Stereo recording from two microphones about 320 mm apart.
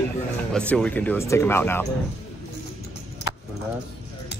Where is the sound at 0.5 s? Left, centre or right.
Centre.